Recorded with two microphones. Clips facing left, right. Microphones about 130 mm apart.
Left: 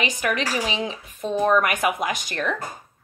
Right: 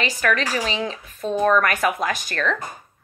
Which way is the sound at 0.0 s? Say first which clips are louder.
Right 2 dB; 20° left (ahead or behind).